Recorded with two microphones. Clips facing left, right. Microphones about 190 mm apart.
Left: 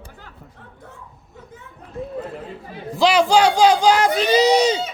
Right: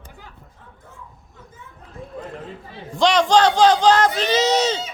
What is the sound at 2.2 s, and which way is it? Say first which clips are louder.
Speech: left 3 dB; 5° left (ahead or behind).